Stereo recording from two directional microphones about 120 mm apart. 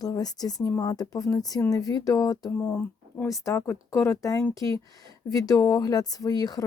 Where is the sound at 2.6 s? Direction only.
20° left (ahead or behind).